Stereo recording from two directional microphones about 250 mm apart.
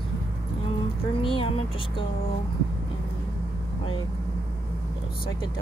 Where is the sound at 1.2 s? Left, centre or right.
Left.